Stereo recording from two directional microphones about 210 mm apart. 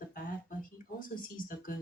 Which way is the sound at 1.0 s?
40° left (ahead or behind).